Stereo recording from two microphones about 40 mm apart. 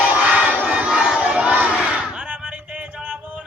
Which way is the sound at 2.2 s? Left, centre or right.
Right.